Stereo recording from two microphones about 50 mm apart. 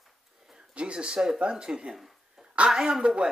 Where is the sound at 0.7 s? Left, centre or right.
Right.